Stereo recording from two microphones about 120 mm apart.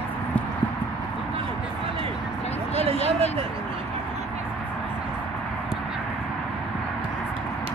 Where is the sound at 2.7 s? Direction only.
55° right (ahead or behind).